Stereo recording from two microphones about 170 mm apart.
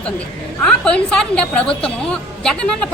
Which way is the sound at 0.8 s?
5° left (ahead or behind).